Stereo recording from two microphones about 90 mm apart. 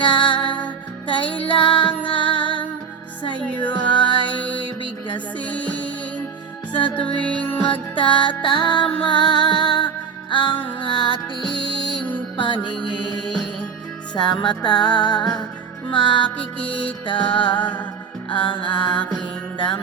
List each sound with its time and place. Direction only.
0.0 s music: 70° left (ahead or behind)
1.2 s music: 15° left (ahead or behind)
1.5 s music: 70° left (ahead or behind)
3.7 s music: 60° left (ahead or behind)
4.3 s music: 15° left (ahead or behind)
7.2 s music: 15° left (ahead or behind)
7.9 s music: 65° left (ahead or behind)
11.5 s music: 65° right (ahead or behind)
12.4 s music: 65° left (ahead or behind)
15.9 s music: 65° left (ahead or behind)
16.4 s music: 15° left (ahead or behind)
17.1 s music: 65° left (ahead or behind)
18.3 s mantra: 70° left (ahead or behind)
19.5 s music: 65° left (ahead or behind)